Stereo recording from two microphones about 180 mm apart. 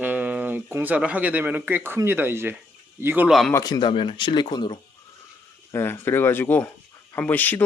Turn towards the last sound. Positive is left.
turn(degrees=10)  # may be behind; listen again after turning